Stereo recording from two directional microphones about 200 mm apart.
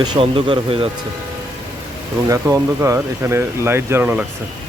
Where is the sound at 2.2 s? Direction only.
15° right (ahead or behind).